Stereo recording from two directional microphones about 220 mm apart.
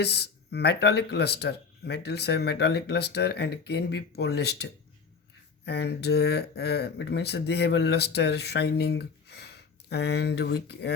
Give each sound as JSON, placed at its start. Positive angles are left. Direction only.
{"t": 0.0, "sound": "speech", "side_deg": 50}